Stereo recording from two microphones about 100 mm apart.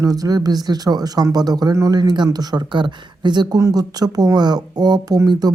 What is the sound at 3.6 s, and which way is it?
Speech, 35° right (ahead or behind).